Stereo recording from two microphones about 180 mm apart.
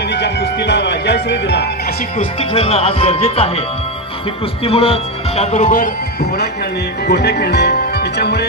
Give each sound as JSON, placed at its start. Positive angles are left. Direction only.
{"t": 0.1, "sound": "speech", "side_deg": 70}
{"t": 2.1, "sound": "speech", "side_deg": 35}
{"t": 4.6, "sound": "speech", "side_deg": 35}
{"t": 7.1, "sound": "speech", "side_deg": 65}